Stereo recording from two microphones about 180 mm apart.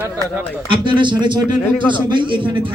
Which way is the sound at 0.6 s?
25° right (ahead or behind).